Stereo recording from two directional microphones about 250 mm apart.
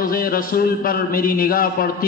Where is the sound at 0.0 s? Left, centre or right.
Left.